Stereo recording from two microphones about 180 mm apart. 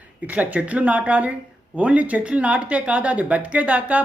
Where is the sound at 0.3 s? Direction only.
5° right (ahead or behind).